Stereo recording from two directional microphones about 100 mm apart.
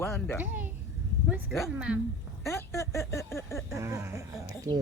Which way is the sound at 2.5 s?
30° left (ahead or behind).